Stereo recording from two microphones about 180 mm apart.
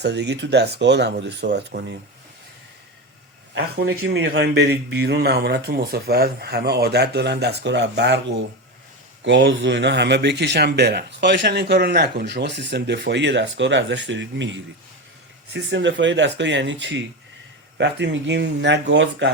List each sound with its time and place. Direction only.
0.0 s speech: 70° right (ahead or behind)
3.5 s speech: 70° right (ahead or behind); by 17.0 s 90° right
17.7 s speech: 80° right